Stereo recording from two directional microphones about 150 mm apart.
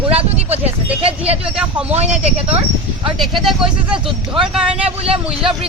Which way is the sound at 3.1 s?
Centre (ahead or behind).